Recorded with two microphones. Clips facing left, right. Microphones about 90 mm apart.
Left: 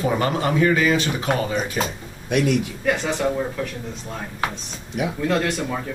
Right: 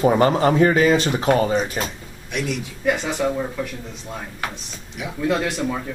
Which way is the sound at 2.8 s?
5° right (ahead or behind).